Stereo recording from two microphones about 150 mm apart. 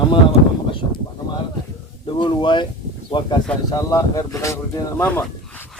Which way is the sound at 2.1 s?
30° left (ahead or behind).